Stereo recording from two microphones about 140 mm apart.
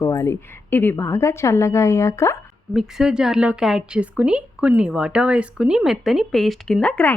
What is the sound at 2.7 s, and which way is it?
Speech, 5° right (ahead or behind).